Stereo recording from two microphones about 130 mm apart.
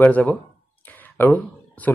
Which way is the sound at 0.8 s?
15° left (ahead or behind).